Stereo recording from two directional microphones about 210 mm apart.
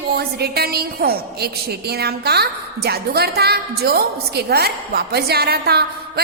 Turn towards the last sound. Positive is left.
turn(degrees=-50)  # may be behind; listen again after turning